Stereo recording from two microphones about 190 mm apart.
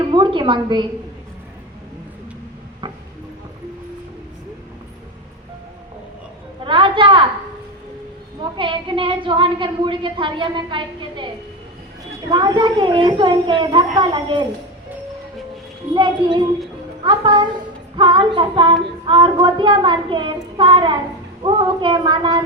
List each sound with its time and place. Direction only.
0.1 s speech: 25° right (ahead or behind)
2.8 s a sound: 25° right (ahead or behind)
6.7 s a sound: 25° right (ahead or behind)
8.4 s a woman's voice: 25° right (ahead or behind)
12.3 s speech: 25° right (ahead or behind)
16.0 s speech: 25° right (ahead or behind)